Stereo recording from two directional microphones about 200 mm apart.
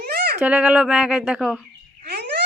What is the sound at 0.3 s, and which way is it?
Speech, 10° right (ahead or behind).